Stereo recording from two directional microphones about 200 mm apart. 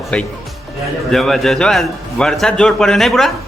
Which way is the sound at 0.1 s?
5° left (ahead or behind).